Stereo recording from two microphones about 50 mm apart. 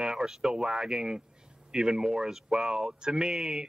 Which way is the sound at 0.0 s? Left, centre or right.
Centre.